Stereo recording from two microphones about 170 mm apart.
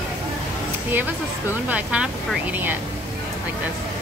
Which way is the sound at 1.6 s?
5° right (ahead or behind).